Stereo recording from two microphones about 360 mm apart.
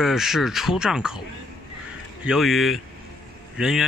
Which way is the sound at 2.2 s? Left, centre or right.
Centre.